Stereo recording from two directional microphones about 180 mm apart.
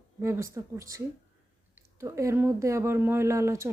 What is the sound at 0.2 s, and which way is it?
Speech, 15° right (ahead or behind).